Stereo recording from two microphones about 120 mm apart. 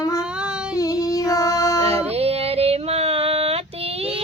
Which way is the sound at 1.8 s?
55° right (ahead or behind).